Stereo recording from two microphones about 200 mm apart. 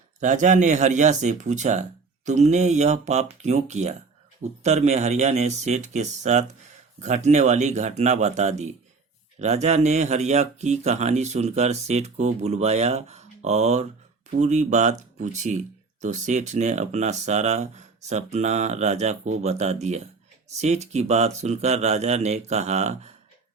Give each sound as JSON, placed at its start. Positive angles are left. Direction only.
{"t": 0.2, "sound": "speech", "side_deg": -40}